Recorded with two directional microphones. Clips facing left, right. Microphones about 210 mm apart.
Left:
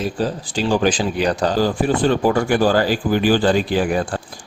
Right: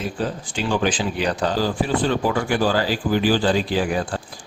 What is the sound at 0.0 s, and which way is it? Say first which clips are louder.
Speech: left 4 dB; 35° left (ahead or behind).